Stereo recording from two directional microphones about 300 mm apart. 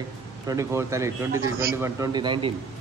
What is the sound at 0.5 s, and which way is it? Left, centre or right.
Speech, centre.